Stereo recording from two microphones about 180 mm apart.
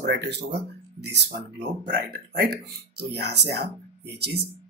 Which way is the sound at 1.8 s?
55° right (ahead or behind).